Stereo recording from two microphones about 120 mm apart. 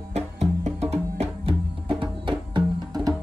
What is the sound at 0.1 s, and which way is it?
Music, 65° right (ahead or behind).